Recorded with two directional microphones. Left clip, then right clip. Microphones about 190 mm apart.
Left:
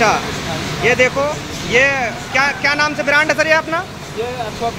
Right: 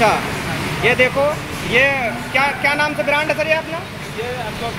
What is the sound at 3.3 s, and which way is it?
Speech, 25° left (ahead or behind).